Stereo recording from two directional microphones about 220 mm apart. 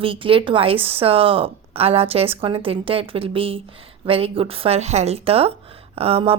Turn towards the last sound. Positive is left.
turn(degrees=-25)  # may be behind; listen again after turning